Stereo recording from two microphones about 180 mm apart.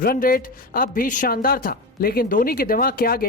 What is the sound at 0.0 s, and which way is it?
Speech, 55° left (ahead or behind).